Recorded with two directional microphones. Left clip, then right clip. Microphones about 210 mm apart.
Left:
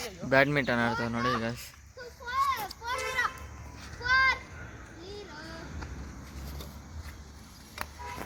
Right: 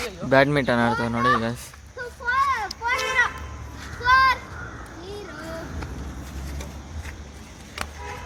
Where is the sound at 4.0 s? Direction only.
20° right (ahead or behind).